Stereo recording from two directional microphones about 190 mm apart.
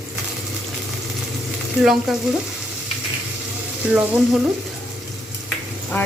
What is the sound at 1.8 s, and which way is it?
Speech, centre (ahead or behind).